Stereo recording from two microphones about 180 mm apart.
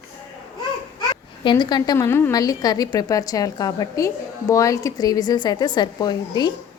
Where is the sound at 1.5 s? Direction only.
25° left (ahead or behind).